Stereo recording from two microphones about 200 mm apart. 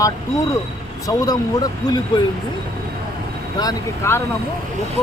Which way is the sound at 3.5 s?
15° left (ahead or behind).